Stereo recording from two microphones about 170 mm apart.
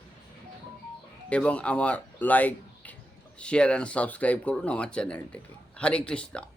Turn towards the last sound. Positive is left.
turn(degrees=5)  # may be behind; listen again after turning